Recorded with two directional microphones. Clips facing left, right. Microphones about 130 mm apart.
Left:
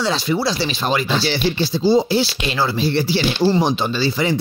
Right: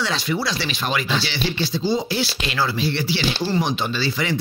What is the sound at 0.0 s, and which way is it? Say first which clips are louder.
Speech: left 4 dB; 30° left (ahead or behind).